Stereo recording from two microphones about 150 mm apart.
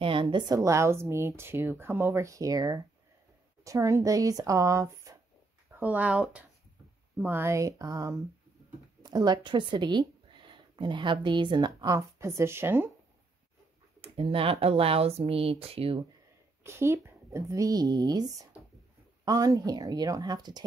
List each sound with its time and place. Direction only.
0.0 s speech: 35° right (ahead or behind)
5.8 s speech: 10° right (ahead or behind)
14.0 s speech: 40° right (ahead or behind)
16.6 s speech: 15° right (ahead or behind)